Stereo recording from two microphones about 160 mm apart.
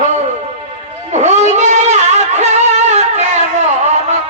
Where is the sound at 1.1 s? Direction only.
45° right (ahead or behind).